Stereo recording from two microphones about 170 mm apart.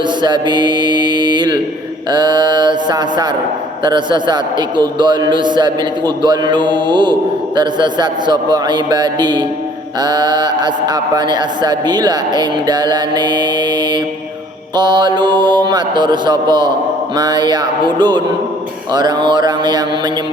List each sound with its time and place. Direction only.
0.2 s mantra: 25° right (ahead or behind)
2.1 s speech: 25° right (ahead or behind)
14.8 s speech: 25° right (ahead or behind)